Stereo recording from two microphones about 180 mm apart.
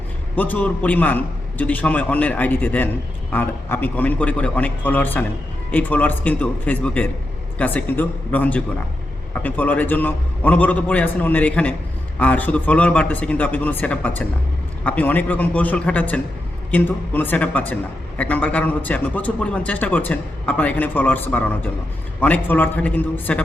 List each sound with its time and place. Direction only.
0.3 s a man's voice: 10° left (ahead or behind)